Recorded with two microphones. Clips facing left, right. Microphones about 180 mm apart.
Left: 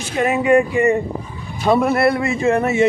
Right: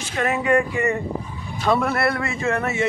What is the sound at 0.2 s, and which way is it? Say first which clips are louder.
A man's voice: left 5 dB; 15° left (ahead or behind).